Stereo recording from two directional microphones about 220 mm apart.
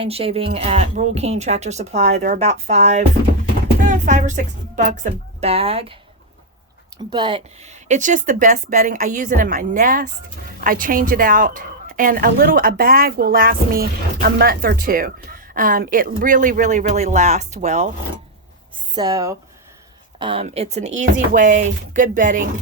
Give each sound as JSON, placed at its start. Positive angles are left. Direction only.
{"t": 0.0, "sound": "a woman's voice", "side_deg": -25}
{"t": 7.1, "sound": "a woman's voice", "side_deg": -20}
{"t": 18.9, "sound": "a woman's voice", "side_deg": -15}